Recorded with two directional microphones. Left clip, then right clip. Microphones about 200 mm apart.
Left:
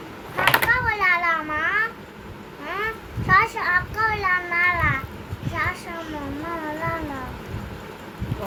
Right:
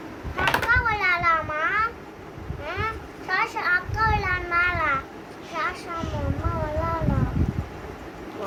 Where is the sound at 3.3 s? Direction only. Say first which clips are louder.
Left 5 dB; 35° right (ahead or behind).